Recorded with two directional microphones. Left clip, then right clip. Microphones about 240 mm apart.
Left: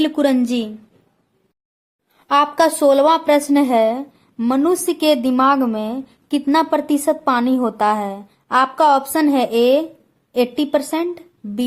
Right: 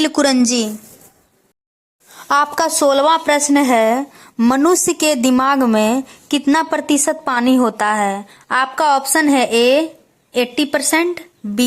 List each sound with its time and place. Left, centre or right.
0.2 s a woman's voice: centre
2.1 s speech: right
2.6 s a woman's voice: centre